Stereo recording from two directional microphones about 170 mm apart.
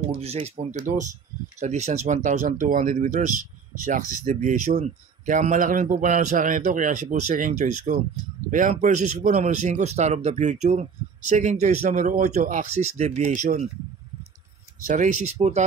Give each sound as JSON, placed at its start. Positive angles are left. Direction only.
{"t": 0.2, "sound": "speech", "side_deg": -40}
{"t": 14.9, "sound": "speech", "side_deg": -50}